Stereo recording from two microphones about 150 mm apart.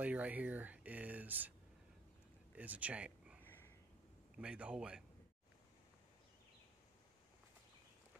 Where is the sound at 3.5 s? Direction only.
15° left (ahead or behind).